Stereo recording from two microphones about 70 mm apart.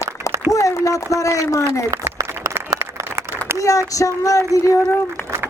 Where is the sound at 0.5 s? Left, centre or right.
Left.